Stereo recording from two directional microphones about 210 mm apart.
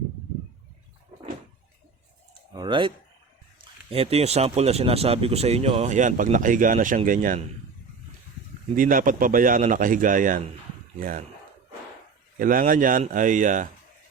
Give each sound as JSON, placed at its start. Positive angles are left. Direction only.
{"t": 2.6, "sound": "speech", "side_deg": -20}
{"t": 8.7, "sound": "speech", "side_deg": -40}
{"t": 12.4, "sound": "speech", "side_deg": -40}